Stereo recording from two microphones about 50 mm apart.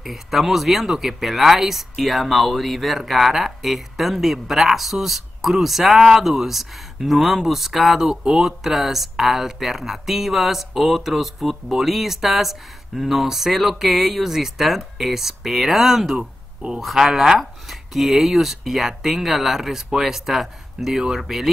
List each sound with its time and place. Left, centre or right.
0.0 s speech: centre
16.2 s speech: centre
16.8 s speech: centre